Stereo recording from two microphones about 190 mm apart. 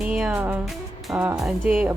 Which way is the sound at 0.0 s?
5° right (ahead or behind).